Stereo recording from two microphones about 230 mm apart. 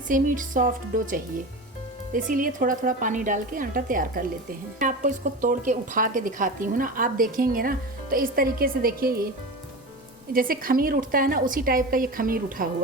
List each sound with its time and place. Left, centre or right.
0.1 s a woman's voice: right
10.3 s a woman's voice: right